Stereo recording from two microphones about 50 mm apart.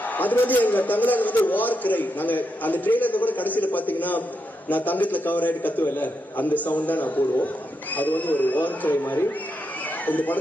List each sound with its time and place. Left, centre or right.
0.1 s a man's voice: left